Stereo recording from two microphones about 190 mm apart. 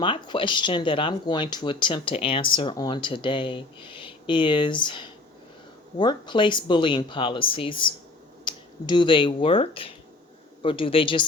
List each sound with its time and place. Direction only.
0.0 s speech: 25° left (ahead or behind)